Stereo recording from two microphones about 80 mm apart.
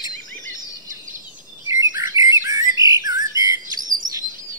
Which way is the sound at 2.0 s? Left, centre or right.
Right.